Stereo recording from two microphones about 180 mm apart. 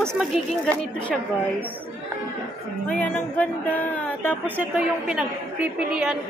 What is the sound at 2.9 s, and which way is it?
Speech, 10° left (ahead or behind).